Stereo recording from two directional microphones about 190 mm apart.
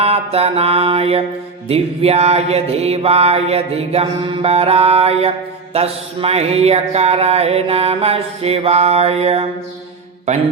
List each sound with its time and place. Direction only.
0.0 s mantra: 30° right (ahead or behind)